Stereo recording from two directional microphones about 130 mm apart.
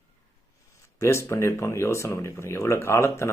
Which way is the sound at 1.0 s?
20° left (ahead or behind).